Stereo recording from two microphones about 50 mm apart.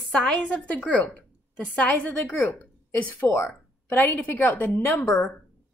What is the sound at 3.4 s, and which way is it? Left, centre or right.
A woman's voice, left.